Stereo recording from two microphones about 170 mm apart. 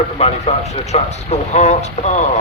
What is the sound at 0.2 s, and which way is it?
A man's voice, 40° left (ahead or behind).